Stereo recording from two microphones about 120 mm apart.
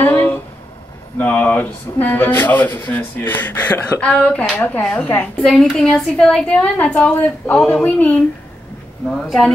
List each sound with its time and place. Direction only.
0.0 s a sound: 15° left (ahead or behind)
1.1 s speech: 15° left (ahead or behind)
5.4 s speech: centre (ahead or behind)